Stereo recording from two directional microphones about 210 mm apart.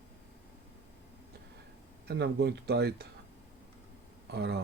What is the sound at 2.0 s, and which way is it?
Speech, 50° right (ahead or behind).